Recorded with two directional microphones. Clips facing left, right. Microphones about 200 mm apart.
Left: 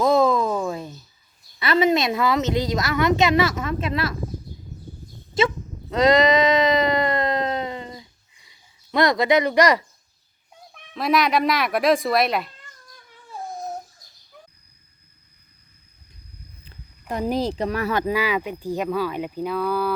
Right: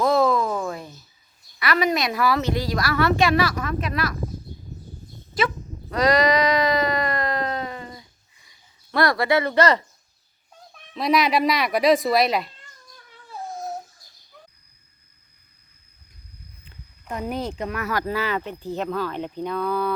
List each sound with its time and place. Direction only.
0.0 s a sound: 20° left (ahead or behind)
1.5 s a woman's voice: 25° left (ahead or behind)
5.9 s a sound: 20° left (ahead or behind)
10.9 s speech: centre (ahead or behind)
13.3 s babbling: 15° left (ahead or behind)
16.6 s speech: 35° left (ahead or behind)
18.0 s speech: 10° left (ahead or behind)